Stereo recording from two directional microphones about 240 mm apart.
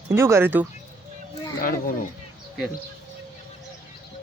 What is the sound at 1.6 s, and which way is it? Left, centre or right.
Speech, left.